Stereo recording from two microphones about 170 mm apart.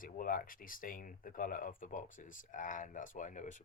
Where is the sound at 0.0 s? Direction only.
55° left (ahead or behind).